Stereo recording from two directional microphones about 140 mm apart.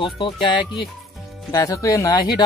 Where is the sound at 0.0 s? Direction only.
35° left (ahead or behind).